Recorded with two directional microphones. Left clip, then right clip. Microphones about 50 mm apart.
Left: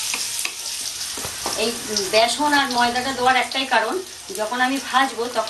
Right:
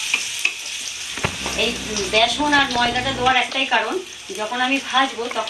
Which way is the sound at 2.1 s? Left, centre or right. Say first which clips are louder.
Right 1 dB; right.